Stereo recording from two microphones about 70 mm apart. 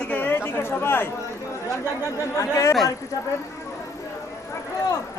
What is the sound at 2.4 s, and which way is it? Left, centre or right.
Speech, left.